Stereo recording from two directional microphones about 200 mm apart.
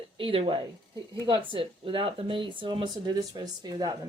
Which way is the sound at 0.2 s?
25° right (ahead or behind).